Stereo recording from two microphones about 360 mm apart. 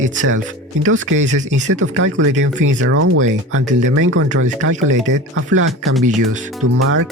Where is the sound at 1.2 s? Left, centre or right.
Centre.